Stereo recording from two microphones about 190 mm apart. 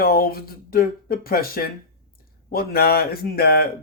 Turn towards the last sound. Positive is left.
turn(degrees=55)  # may be behind; listen again after turning